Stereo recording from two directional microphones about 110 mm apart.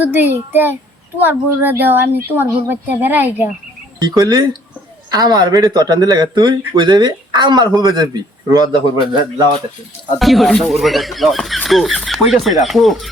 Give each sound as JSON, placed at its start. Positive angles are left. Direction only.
{"t": 0.0, "sound": "a woman's voice", "side_deg": -15}
{"t": 4.0, "sound": "speech", "side_deg": -40}
{"t": 10.2, "sound": "speech", "side_deg": 0}